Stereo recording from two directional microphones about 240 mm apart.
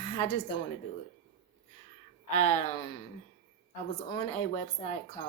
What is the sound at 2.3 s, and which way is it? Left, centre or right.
Speech, left.